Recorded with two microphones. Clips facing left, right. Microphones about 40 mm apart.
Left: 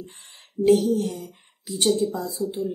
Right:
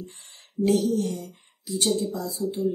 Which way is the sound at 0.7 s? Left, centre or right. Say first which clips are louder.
Left 4 dB; centre.